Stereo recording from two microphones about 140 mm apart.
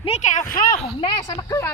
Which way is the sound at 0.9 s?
40° left (ahead or behind).